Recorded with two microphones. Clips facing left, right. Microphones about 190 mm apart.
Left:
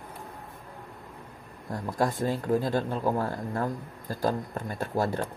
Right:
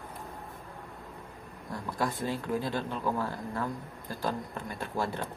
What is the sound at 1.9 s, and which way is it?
Speech, 45° left (ahead or behind).